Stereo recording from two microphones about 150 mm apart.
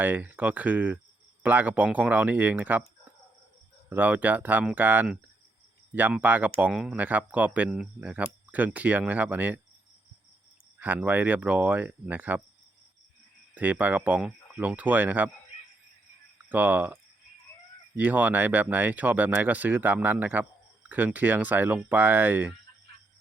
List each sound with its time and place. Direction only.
0.0 s speech: 10° right (ahead or behind)
3.8 s speech: 10° right (ahead or behind)
10.8 s speech: 10° right (ahead or behind)
13.5 s speech: 10° right (ahead or behind)
16.5 s speech: 10° right (ahead or behind)